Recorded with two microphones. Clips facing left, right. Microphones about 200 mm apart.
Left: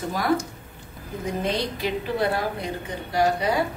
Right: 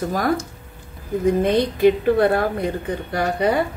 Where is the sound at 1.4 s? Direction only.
55° right (ahead or behind).